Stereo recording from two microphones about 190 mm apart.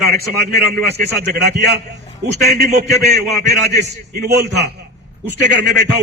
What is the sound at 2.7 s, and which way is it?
A man's voice, 55° right (ahead or behind).